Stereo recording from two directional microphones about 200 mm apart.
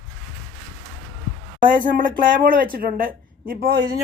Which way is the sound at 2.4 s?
45° right (ahead or behind).